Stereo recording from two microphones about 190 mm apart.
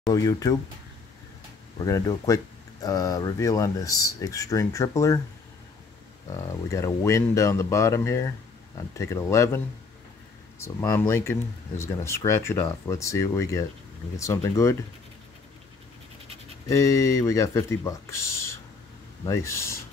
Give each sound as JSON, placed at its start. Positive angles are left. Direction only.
{"t": 0.1, "sound": "speech", "side_deg": 20}
{"t": 1.8, "sound": "speech", "side_deg": 15}
{"t": 6.3, "sound": "speech", "side_deg": 15}
{"t": 10.6, "sound": "speech", "side_deg": 15}
{"t": 16.6, "sound": "speech", "side_deg": 15}